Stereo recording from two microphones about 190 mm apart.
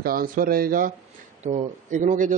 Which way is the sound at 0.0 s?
50° right (ahead or behind).